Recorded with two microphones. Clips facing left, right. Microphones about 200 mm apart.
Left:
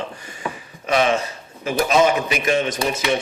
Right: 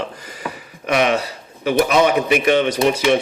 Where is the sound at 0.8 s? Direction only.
65° right (ahead or behind).